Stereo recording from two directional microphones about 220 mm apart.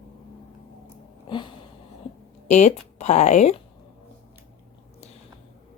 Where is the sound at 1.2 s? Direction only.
20° left (ahead or behind).